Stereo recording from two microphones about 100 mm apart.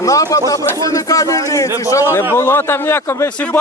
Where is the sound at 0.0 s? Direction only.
35° left (ahead or behind).